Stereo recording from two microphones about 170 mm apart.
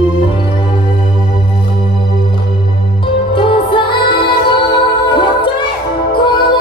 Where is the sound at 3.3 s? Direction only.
30° left (ahead or behind).